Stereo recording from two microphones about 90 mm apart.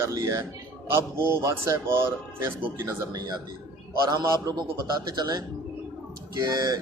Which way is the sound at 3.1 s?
45° right (ahead or behind).